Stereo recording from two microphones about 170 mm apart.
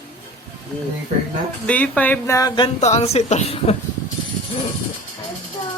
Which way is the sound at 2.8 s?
40° left (ahead or behind).